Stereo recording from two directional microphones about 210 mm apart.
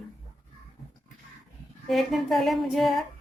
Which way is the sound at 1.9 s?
Centre (ahead or behind).